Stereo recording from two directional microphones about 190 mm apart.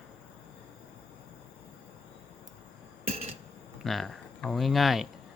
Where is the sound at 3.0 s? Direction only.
30° right (ahead or behind).